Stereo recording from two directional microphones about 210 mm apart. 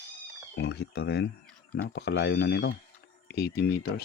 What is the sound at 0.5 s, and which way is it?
Speech, 50° left (ahead or behind).